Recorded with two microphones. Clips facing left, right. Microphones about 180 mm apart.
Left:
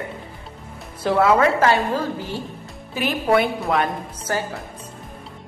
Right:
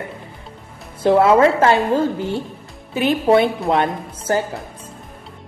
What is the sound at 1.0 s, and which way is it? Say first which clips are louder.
A woman's voice: right 4 dB; 25° right (ahead or behind).